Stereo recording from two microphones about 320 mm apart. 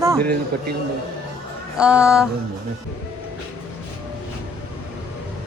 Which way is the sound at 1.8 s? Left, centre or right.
Centre.